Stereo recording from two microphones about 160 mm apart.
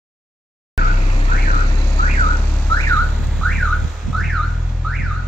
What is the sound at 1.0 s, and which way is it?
Car alarm, 40° left (ahead or behind).